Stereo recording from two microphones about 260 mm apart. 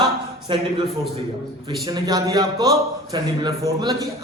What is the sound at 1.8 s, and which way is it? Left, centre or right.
A man's voice, centre.